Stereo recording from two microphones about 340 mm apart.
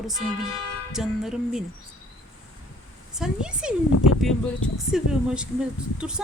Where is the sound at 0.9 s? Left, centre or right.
Centre.